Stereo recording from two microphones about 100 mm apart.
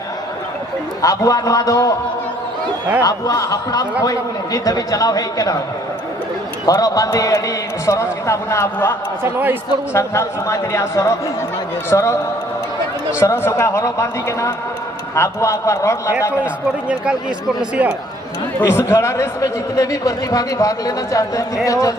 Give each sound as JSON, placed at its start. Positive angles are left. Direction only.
{"t": 1.0, "sound": "speech", "side_deg": 35}
{"t": 3.0, "sound": "speech", "side_deg": 35}
{"t": 6.7, "sound": "speech", "side_deg": 40}
{"t": 9.2, "sound": "a man's voice", "side_deg": -20}
{"t": 9.9, "sound": "speech", "side_deg": 30}
{"t": 13.1, "sound": "speech", "side_deg": 25}
{"t": 16.9, "sound": "speech", "side_deg": -10}
{"t": 18.6, "sound": "speech", "side_deg": 25}